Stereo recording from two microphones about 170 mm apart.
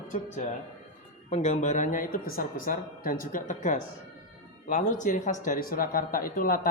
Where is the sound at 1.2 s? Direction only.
40° left (ahead or behind).